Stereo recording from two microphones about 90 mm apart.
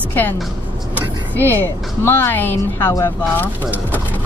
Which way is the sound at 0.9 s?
20° right (ahead or behind).